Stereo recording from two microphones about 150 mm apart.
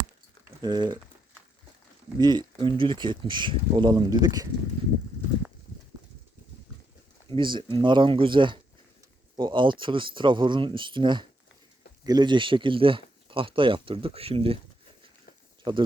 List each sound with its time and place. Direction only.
0.6 s speech: 30° right (ahead or behind)
2.1 s speech: 30° right (ahead or behind)
7.3 s speech: 30° right (ahead or behind)
15.7 s speech: 35° right (ahead or behind)